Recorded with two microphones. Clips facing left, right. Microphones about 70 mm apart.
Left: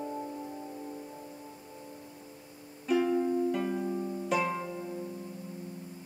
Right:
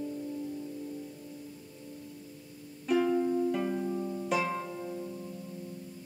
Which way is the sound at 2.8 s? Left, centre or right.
Centre.